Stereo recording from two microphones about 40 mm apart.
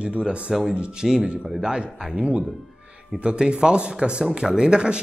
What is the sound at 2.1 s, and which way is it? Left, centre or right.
Speech, right.